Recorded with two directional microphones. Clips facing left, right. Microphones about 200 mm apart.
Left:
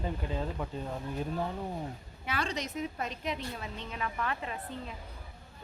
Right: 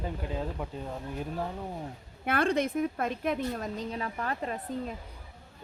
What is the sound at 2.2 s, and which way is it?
A woman's voice, 55° right (ahead or behind).